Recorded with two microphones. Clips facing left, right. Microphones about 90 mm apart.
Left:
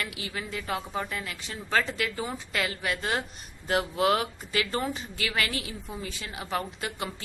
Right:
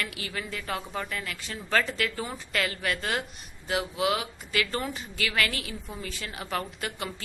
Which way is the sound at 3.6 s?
45° left (ahead or behind).